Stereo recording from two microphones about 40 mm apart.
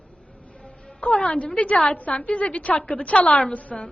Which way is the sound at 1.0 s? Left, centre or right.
Left.